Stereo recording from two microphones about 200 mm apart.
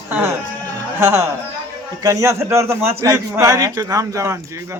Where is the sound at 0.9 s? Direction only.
15° right (ahead or behind).